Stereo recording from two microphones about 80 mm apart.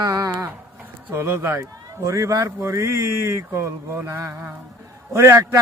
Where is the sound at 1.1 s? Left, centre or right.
Right.